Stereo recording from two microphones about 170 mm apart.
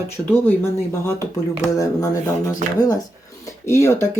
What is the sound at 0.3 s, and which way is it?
Speech, 10° left (ahead or behind).